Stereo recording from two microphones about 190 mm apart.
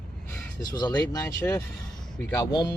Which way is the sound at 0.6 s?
20° left (ahead or behind).